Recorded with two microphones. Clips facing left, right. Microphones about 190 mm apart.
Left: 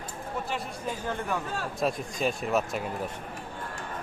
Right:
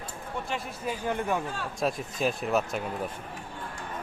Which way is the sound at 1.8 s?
Centre (ahead or behind).